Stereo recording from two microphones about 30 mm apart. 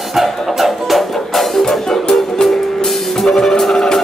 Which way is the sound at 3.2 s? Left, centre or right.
Left.